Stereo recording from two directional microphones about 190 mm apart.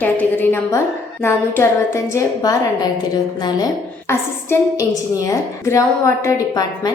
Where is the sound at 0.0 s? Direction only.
10° left (ahead or behind).